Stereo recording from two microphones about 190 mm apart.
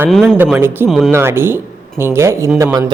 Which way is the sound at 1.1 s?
15° right (ahead or behind).